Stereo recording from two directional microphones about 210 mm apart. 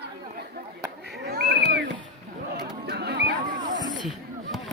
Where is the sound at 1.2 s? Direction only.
50° right (ahead or behind).